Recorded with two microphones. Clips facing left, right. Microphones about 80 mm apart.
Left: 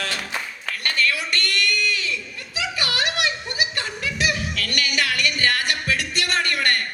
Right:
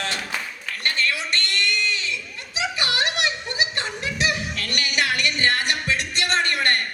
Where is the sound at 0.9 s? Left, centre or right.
Right.